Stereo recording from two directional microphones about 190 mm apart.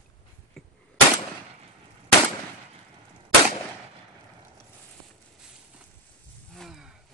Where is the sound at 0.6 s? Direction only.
Centre (ahead or behind).